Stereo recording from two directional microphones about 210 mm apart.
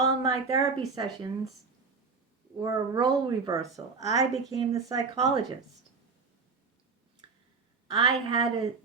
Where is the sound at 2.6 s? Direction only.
20° right (ahead or behind).